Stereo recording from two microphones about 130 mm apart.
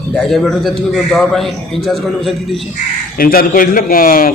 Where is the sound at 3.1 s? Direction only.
90° left.